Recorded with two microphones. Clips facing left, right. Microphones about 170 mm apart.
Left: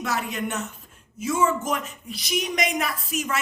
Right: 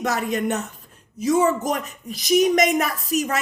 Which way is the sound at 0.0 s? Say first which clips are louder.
Right 5 dB; 40° right (ahead or behind).